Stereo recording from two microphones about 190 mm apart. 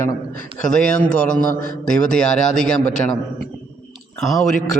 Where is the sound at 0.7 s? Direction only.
5° left (ahead or behind).